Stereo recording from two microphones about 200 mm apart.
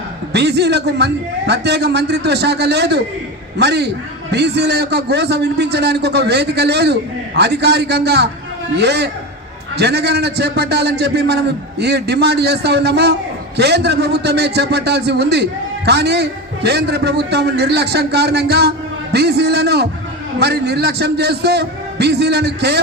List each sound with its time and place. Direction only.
0.3 s a man's voice: 55° right (ahead or behind)